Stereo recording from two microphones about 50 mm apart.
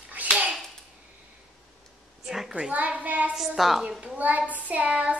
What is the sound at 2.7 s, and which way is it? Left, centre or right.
Speech, right.